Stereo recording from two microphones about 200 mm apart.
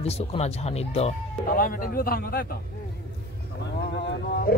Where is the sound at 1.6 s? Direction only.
45° left (ahead or behind).